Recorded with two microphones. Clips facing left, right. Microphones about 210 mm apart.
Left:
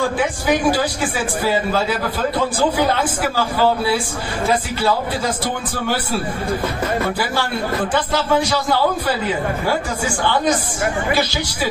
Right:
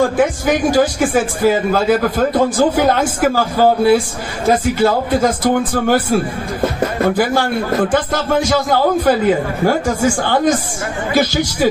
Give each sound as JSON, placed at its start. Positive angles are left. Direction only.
{"t": 0.0, "sound": "speech", "side_deg": -45}
{"t": 6.6, "sound": "speech", "side_deg": -35}
{"t": 7.2, "sound": "speech", "side_deg": -50}